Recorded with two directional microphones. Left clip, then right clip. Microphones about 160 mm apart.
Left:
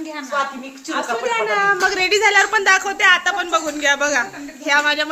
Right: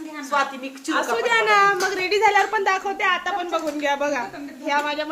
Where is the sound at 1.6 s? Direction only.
5° right (ahead or behind).